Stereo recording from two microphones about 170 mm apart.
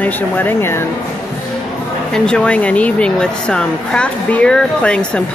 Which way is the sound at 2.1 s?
5° left (ahead or behind).